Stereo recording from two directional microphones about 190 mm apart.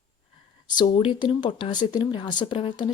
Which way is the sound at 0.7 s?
25° left (ahead or behind).